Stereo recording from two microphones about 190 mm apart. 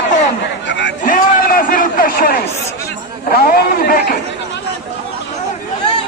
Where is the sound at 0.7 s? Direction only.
70° left (ahead or behind).